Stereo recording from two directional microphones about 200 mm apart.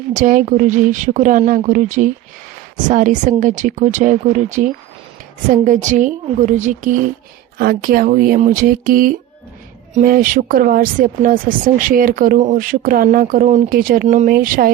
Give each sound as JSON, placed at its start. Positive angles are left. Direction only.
{"t": 0.1, "sound": "a woman's voice", "side_deg": -40}